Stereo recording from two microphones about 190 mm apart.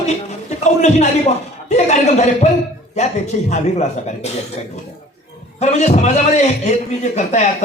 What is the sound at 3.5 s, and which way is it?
Speech, 35° left (ahead or behind).